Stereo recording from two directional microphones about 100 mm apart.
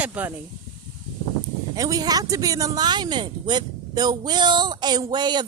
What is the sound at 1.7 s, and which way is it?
Speech, 35° right (ahead or behind).